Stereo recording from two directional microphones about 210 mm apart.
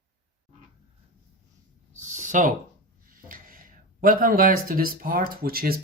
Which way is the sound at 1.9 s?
35° right (ahead or behind).